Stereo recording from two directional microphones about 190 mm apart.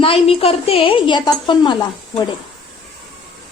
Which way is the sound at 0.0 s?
30° left (ahead or behind).